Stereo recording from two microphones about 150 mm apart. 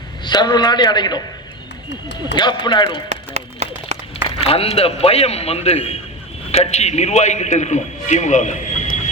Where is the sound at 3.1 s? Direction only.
45° right (ahead or behind).